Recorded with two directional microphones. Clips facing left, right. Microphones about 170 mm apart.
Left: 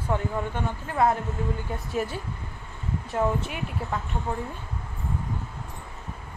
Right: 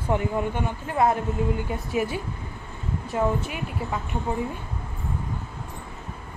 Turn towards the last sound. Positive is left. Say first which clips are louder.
# right 2 dB
turn(degrees=-5)  # may be behind; listen again after turning